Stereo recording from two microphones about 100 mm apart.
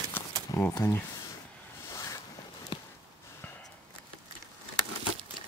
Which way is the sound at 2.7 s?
55° left (ahead or behind).